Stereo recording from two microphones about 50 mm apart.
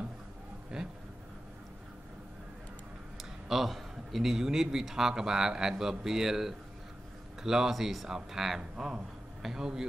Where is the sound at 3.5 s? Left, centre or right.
Centre.